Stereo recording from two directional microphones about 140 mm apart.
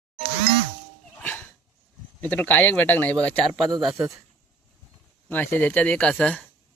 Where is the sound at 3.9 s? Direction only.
20° right (ahead or behind).